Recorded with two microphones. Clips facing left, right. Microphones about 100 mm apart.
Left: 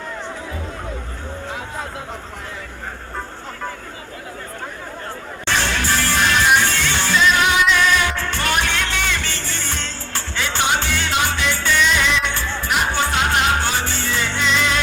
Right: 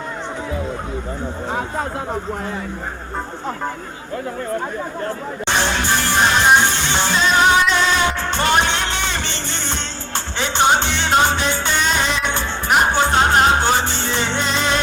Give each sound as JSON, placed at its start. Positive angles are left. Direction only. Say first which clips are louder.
{"t": 5.5, "sound": "music", "louder": "right 1 dB", "side_deg": -20}
{"t": 7.3, "sound": "music", "louder": "right 3 dB", "side_deg": -30}
{"t": 11.8, "sound": "music", "louder": "left 2 dB", "side_deg": -40}
{"t": 12.3, "sound": "music", "louder": "right 4 dB", "side_deg": -20}
{"t": 13.5, "sound": "music", "louder": "right 4 dB", "side_deg": -25}
{"t": 14.4, "sound": "music", "louder": "left 3 dB", "side_deg": -35}